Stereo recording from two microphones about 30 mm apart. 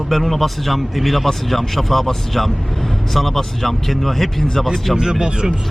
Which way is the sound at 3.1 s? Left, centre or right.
Centre.